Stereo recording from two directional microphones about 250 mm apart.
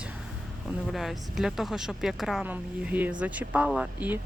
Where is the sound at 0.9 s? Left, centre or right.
Centre.